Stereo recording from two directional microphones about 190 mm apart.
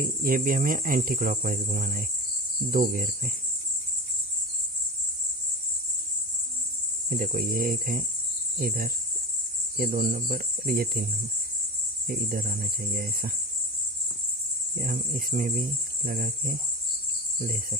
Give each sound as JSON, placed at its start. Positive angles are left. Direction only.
{"t": 0.0, "sound": "speech", "side_deg": -45}
{"t": 7.1, "sound": "speech", "side_deg": -45}
{"t": 12.1, "sound": "speech", "side_deg": -50}
{"t": 14.8, "sound": "speech", "side_deg": -50}